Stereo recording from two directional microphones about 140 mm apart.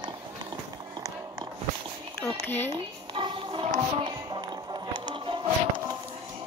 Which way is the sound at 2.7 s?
35° right (ahead or behind).